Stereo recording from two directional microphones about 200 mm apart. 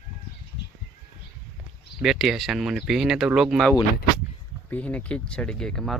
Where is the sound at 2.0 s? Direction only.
Centre (ahead or behind).